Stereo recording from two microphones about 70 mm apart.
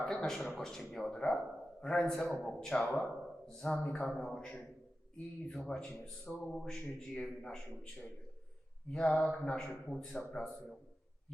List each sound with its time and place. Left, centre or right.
0.0 s speech: centre
4.1 s speech: centre
8.9 s speech: centre